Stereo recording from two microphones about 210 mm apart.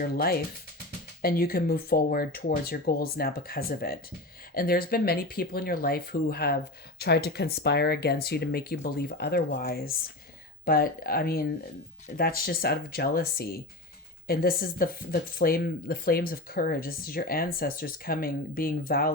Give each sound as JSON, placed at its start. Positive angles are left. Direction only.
{"t": 0.0, "sound": "speech", "side_deg": 45}